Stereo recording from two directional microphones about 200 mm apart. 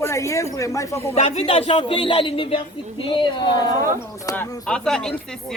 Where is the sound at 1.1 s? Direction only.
30° left (ahead or behind).